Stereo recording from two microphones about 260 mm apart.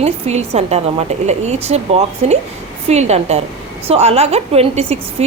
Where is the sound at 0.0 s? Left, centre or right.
Right.